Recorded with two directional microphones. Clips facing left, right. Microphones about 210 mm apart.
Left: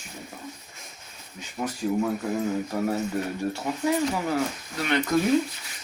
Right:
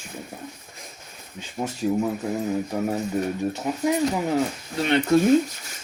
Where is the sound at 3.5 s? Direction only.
20° right (ahead or behind).